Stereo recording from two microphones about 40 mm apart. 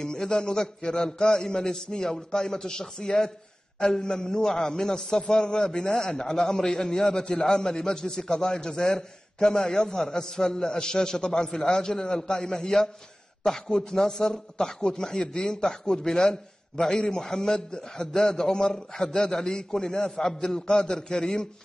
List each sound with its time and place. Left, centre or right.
0.0 s a man's voice: centre